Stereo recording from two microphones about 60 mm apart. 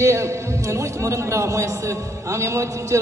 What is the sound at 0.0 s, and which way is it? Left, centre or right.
A man's voice, right.